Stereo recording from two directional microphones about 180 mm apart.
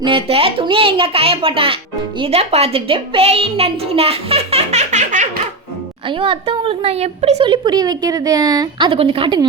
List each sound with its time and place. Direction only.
0.0 s a child's voice: 30° right (ahead or behind)
6.1 s a woman's voice: 30° right (ahead or behind)